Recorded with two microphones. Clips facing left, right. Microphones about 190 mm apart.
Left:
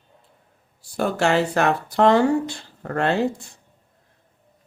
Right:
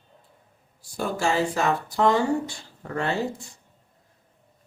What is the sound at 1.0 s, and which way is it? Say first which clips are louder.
Speech: left 4 dB; 70° left (ahead or behind).